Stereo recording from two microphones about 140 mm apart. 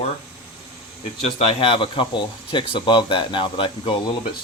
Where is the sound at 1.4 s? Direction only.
45° left (ahead or behind).